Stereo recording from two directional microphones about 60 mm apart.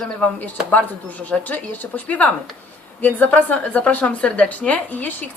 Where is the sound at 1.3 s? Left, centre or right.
Left.